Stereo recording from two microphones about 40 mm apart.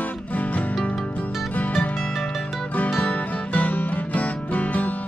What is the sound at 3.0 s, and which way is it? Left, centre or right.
Music, left.